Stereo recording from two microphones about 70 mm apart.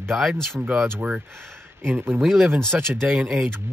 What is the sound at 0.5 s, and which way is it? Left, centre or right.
Speech, right.